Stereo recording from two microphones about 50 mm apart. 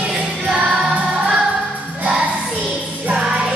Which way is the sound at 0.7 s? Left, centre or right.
Centre.